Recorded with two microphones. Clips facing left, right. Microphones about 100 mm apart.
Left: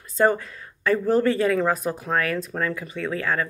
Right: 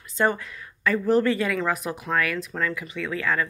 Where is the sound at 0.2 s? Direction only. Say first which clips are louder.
Left 4 dB; 35° left (ahead or behind).